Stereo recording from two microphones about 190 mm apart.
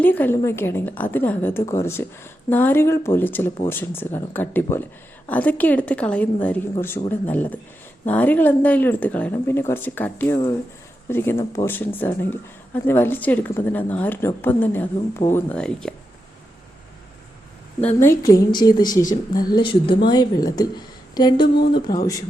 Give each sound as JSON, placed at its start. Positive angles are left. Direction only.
{"t": 0.0, "sound": "speech", "side_deg": 10}
{"t": 18.0, "sound": "a woman's voice", "side_deg": 15}